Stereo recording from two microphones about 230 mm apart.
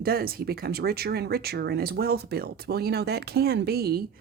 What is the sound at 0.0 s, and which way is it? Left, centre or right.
Speech, right.